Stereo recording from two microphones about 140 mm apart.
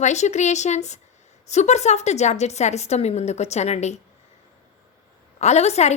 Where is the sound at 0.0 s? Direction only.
55° left (ahead or behind).